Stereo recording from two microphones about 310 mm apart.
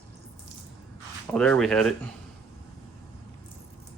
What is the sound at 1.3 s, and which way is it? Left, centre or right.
Speech, centre.